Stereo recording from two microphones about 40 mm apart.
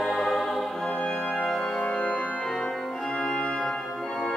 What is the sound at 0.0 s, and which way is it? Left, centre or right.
Music, centre.